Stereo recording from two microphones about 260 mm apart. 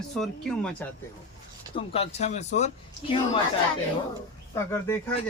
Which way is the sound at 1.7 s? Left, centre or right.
Left.